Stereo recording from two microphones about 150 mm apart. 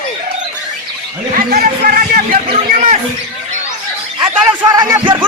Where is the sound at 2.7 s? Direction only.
60° right (ahead or behind).